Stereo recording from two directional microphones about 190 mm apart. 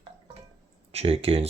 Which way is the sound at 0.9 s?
30° right (ahead or behind).